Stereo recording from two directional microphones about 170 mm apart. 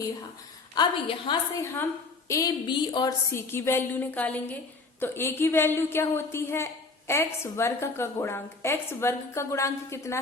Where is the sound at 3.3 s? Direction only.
15° left (ahead or behind).